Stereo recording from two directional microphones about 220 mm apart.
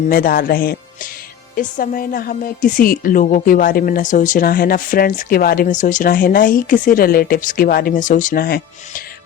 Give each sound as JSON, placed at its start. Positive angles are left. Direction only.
{"t": 0.1, "sound": "a woman's voice", "side_deg": 40}